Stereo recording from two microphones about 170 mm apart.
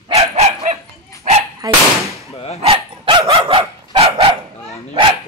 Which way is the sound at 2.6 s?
30° right (ahead or behind).